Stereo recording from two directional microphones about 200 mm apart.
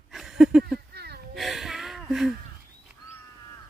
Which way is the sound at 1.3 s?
Centre (ahead or behind).